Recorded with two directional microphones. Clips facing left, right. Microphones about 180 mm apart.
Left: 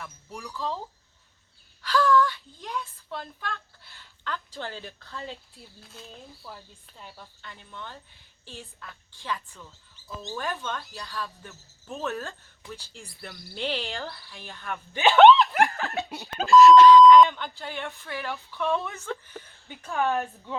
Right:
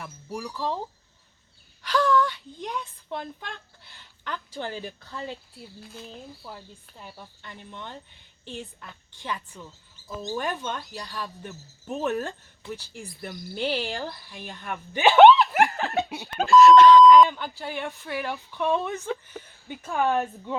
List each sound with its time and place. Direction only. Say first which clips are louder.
0.4 s speech: right 2 dB; 15° right (ahead or behind)
1.8 s speech: even; 15° right (ahead or behind)
5.8 s speech: right 4 dB; centre (ahead or behind)
6.1 s speech: right 3 dB; 10° right (ahead or behind)
15.5 s laughter: right 2 dB; 15° right (ahead or behind)
16.0 s speech: right 1 dB; centre (ahead or behind)
16.6 s speech: even; 55° right (ahead or behind)
17.0 s speech: even; centre (ahead or behind)